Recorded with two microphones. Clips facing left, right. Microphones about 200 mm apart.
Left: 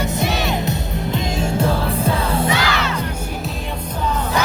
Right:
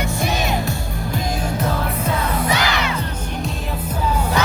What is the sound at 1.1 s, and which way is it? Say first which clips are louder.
Music: left 2 dB; 25° left (ahead or behind).